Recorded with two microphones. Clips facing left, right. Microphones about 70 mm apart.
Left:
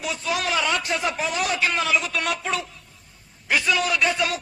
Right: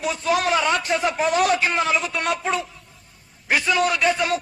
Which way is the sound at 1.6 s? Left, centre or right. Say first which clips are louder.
Right 2 dB; right.